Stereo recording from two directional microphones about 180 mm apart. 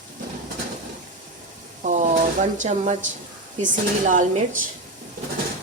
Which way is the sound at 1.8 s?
45° right (ahead or behind).